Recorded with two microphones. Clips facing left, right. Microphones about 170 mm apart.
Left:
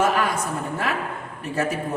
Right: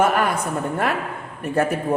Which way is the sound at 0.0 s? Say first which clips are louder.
Right 2 dB; 55° right (ahead or behind).